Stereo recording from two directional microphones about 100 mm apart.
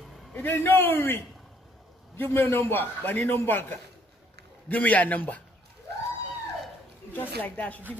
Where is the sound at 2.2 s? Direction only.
20° left (ahead or behind).